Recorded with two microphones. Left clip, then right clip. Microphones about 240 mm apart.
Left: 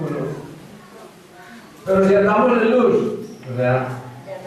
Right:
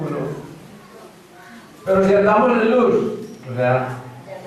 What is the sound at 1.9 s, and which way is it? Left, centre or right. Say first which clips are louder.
Speech: right 1 dB; centre.